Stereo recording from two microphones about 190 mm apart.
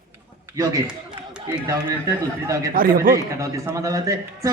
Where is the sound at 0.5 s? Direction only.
20° right (ahead or behind).